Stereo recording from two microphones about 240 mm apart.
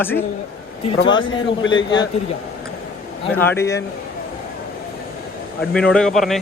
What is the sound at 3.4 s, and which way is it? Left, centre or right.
Speech, centre.